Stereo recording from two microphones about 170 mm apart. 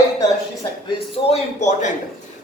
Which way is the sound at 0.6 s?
30° left (ahead or behind).